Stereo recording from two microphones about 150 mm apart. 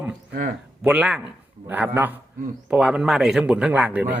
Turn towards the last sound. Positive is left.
turn(degrees=-10)  # may be behind; listen again after turning